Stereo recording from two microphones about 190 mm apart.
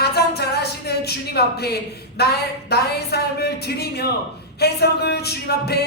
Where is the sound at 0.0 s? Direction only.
60° left (ahead or behind).